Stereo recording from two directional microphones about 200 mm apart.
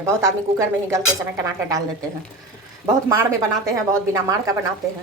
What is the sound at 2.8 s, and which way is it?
Speech, 15° right (ahead or behind).